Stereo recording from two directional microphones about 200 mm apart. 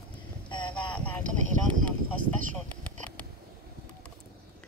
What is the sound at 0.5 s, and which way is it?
Boat, 25° left (ahead or behind).